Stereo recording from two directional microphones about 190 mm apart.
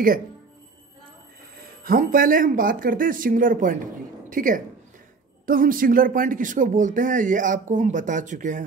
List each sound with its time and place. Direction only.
1.9 s speech: 45° right (ahead or behind)